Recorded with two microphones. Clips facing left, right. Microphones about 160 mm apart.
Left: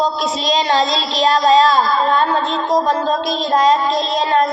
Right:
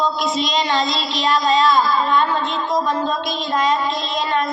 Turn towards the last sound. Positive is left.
turn(degrees=40)  # may be behind; listen again after turning